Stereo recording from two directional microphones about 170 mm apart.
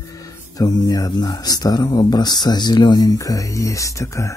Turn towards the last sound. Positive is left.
turn(degrees=20)  # may be behind; listen again after turning